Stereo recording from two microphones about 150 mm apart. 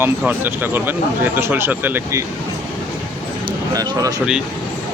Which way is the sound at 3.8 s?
25° right (ahead or behind).